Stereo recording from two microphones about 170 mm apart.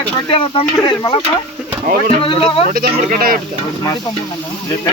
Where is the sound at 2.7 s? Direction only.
60° right (ahead or behind).